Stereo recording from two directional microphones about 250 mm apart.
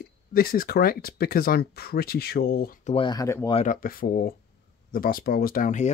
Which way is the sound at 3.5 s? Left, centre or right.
Left.